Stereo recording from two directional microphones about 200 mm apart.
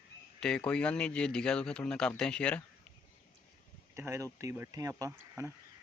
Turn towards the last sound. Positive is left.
turn(degrees=-15)  # may be behind; listen again after turning